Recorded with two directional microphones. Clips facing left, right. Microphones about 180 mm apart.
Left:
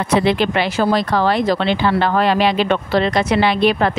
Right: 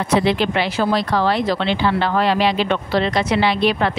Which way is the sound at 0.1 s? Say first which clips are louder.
Left 2 dB; 55° left (ahead or behind).